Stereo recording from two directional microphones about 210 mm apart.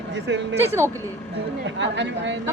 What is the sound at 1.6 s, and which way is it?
Speech, 60° right (ahead or behind).